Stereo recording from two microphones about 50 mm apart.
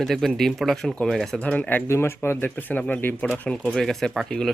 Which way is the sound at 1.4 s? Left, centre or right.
Left.